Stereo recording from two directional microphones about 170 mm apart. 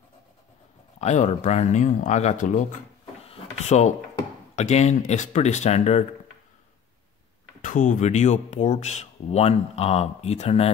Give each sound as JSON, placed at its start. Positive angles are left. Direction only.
{"t": 1.0, "sound": "speech", "side_deg": 40}
{"t": 3.2, "sound": "drawer open or close", "side_deg": 40}
{"t": 4.6, "sound": "speech", "side_deg": 40}
{"t": 7.6, "sound": "speech", "side_deg": 50}